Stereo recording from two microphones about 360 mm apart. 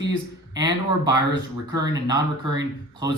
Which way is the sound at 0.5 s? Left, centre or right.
Centre.